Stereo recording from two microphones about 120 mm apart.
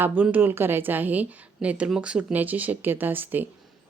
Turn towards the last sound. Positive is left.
turn(degrees=-15)  # may be behind; listen again after turning